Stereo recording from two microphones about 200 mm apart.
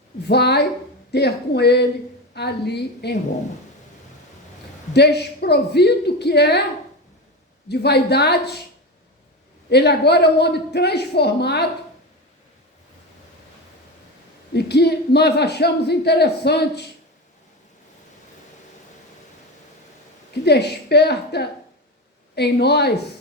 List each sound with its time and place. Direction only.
0.3 s speech: 55° left (ahead or behind)
4.9 s speech: 55° left (ahead or behind)
7.7 s speech: 55° left (ahead or behind)
9.6 s speech: 55° left (ahead or behind)
14.5 s speech: 55° left (ahead or behind)
20.4 s a woman's voice: 55° left (ahead or behind)